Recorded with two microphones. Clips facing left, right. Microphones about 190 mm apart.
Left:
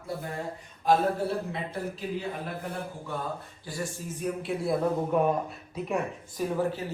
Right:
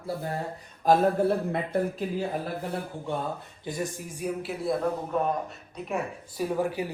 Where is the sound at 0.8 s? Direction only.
55° right (ahead or behind).